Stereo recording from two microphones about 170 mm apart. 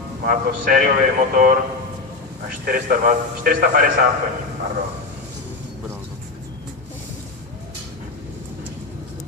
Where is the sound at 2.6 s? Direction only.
60° right (ahead or behind).